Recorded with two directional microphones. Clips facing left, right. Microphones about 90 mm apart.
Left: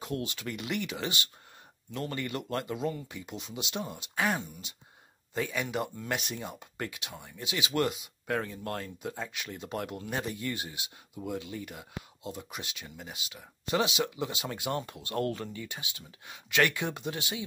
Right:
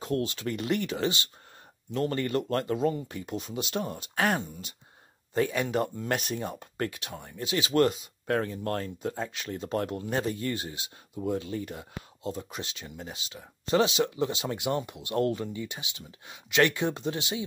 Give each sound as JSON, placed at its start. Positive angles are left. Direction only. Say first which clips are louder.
{"t": 0.0, "sound": "speech", "louder": "right 5 dB", "side_deg": -35}